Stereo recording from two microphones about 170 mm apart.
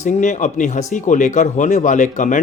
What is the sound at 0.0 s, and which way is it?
Speech, 45° left (ahead or behind).